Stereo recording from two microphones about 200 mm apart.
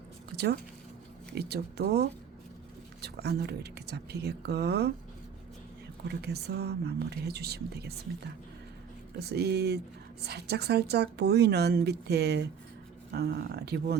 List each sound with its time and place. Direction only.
0.3 s a sound: 55° right (ahead or behind)
1.4 s a woman's voice: 55° right (ahead or behind)
6.1 s speech: 55° right (ahead or behind)
9.1 s a woman's voice: 55° right (ahead or behind)